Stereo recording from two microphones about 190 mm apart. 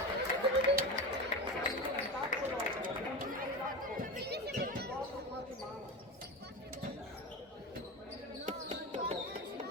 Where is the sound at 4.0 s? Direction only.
55° right (ahead or behind).